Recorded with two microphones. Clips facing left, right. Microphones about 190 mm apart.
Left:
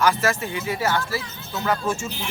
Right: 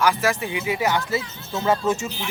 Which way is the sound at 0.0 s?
15° right (ahead or behind).